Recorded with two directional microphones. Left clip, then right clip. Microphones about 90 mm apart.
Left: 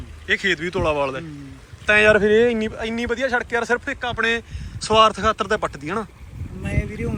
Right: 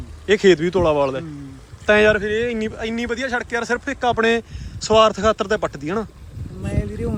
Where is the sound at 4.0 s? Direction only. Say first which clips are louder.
Right 4 dB; 55° right (ahead or behind).